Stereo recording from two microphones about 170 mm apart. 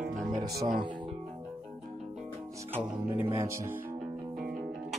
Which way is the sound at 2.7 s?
10° right (ahead or behind).